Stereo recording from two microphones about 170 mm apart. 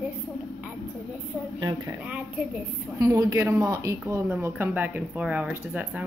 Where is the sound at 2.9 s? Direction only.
20° right (ahead or behind).